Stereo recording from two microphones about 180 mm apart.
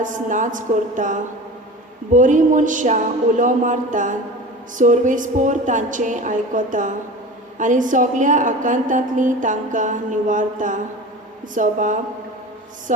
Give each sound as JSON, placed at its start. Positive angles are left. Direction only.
{"t": 0.0, "sound": "a woman's voice", "side_deg": -45}